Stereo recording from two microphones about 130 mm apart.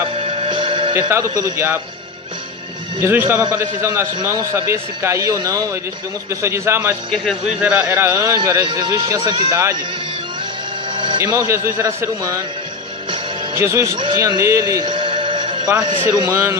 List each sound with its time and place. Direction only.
0.2 s music: 50° right (ahead or behind)
0.9 s a man's voice: 20° right (ahead or behind)
3.0 s a man's voice: 20° right (ahead or behind)
7.1 s speech: centre (ahead or behind)
7.6 s a man's voice: 10° right (ahead or behind); by 9.6 s 35° right (ahead or behind)
10.9 s a sound: 35° right (ahead or behind)
11.2 s a man's voice: 25° right (ahead or behind)
13.6 s a man's voice: 20° right (ahead or behind)
14.1 s music: 25° right (ahead or behind)
15.9 s a man's voice: 30° right (ahead or behind)